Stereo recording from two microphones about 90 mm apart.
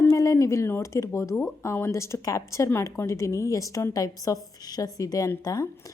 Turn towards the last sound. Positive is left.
turn(degrees=40)  # may be behind; listen again after turning